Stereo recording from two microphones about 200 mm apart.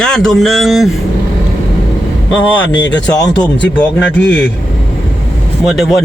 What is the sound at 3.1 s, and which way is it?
Speech, 20° left (ahead or behind).